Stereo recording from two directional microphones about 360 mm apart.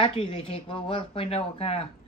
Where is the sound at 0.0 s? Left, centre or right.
Centre.